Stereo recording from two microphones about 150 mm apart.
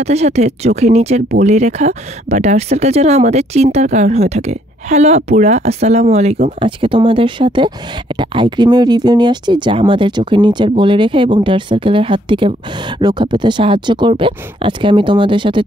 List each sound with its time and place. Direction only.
0.0 s speech: 45° right (ahead or behind)
6.6 s speech: 35° right (ahead or behind)